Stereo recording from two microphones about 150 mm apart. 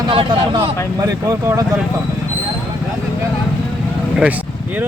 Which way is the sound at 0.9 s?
20° right (ahead or behind).